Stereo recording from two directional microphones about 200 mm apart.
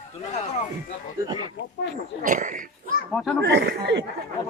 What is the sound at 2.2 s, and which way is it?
Speech, 40° right (ahead or behind).